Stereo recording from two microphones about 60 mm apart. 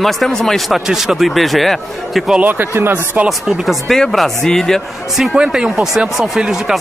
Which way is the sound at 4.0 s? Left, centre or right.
Centre.